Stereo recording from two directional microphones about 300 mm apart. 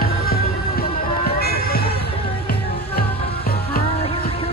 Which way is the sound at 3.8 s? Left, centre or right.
Centre.